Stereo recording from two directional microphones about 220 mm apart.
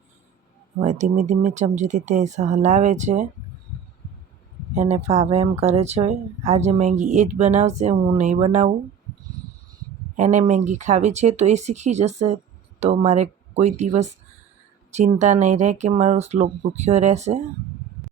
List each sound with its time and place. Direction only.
0.8 s speech: 35° right (ahead or behind)
4.7 s speech: 30° right (ahead or behind)
10.2 s speech: 35° right (ahead or behind)